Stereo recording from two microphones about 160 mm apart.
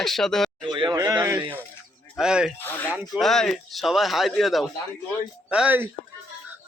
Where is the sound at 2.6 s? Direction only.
15° left (ahead or behind).